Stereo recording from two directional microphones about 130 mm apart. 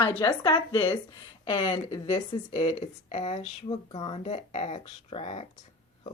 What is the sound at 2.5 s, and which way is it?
Speech, 60° left (ahead or behind).